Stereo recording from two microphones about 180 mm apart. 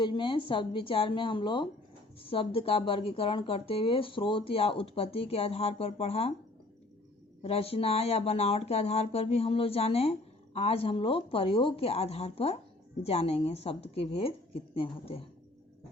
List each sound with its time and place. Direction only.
0.0 s a woman's voice: 25° left (ahead or behind)
7.4 s speech: 30° left (ahead or behind)